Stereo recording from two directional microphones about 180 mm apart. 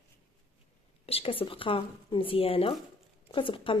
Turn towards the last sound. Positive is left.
turn(degrees=30)  # may be behind; listen again after turning